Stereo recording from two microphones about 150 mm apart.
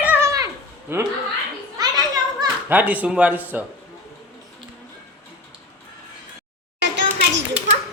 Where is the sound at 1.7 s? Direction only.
25° right (ahead or behind).